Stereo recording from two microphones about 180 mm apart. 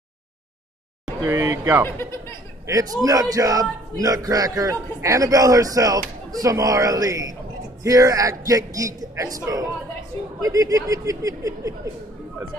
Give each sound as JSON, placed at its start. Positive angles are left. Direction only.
{"t": 1.2, "sound": "speech", "side_deg": -15}
{"t": 1.9, "sound": "speech", "side_deg": 15}
{"t": 2.6, "sound": "a man's voice", "side_deg": -20}